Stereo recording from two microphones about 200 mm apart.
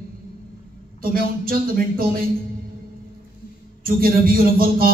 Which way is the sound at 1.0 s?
45° right (ahead or behind).